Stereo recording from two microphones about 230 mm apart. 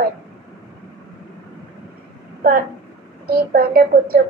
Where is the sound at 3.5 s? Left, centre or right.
Right.